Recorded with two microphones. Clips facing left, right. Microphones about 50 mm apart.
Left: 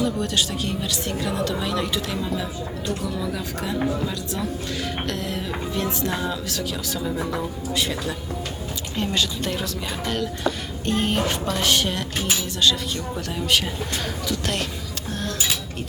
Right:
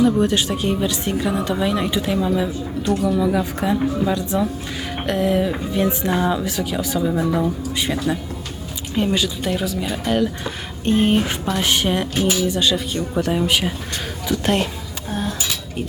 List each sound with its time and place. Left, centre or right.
0.0 s a woman's voice: right
7.2 s a woman's voice: centre
7.7 s a woman's voice: centre